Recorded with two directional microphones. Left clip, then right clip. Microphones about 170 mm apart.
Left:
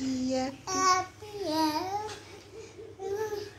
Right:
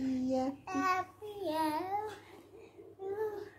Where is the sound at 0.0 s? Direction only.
20° right (ahead or behind).